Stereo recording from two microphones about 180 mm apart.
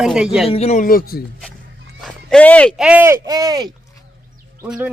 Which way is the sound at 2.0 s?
5° left (ahead or behind).